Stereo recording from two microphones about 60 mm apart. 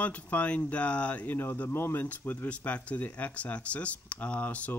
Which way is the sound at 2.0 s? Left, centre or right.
Left.